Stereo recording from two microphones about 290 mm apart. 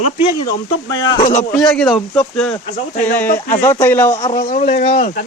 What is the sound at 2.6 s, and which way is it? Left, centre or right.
Speech, left.